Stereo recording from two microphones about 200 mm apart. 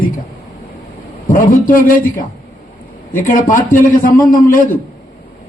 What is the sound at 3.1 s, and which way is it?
Speech, 40° left (ahead or behind).